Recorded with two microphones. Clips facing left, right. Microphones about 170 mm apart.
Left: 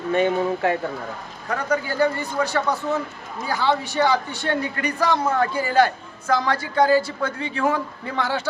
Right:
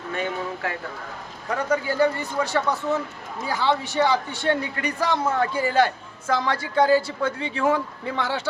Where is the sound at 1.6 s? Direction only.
25° right (ahead or behind).